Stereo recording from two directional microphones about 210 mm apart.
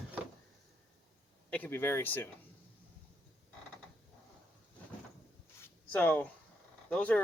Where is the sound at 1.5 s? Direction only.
5° left (ahead or behind).